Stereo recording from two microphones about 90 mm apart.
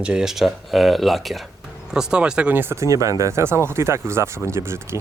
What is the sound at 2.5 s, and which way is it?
Speech, 25° right (ahead or behind).